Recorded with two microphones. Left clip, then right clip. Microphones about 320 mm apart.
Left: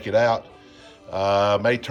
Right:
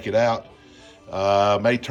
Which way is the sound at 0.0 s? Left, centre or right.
Centre.